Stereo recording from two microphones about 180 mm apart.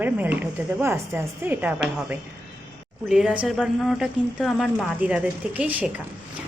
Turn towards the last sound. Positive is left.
turn(degrees=-10)  # may be behind; listen again after turning